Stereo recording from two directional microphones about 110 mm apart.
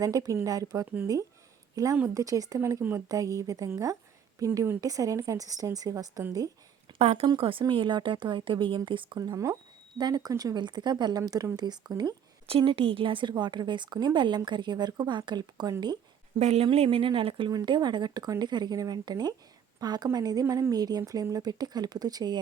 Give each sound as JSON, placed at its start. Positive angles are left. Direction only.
{"t": 0.0, "sound": "a woman's voice", "side_deg": -30}
{"t": 7.0, "sound": "speech", "side_deg": -75}
{"t": 7.3, "sound": "speech", "side_deg": -55}
{"t": 11.2, "sound": "speech", "side_deg": -30}
{"t": 12.5, "sound": "speech", "side_deg": -55}
{"t": 16.4, "sound": "speech", "side_deg": -75}
{"t": 16.6, "sound": "speech", "side_deg": -60}
{"t": 17.5, "sound": "speech", "side_deg": -40}